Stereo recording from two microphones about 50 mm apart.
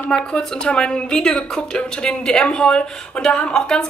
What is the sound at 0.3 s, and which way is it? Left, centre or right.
A woman's voice, centre.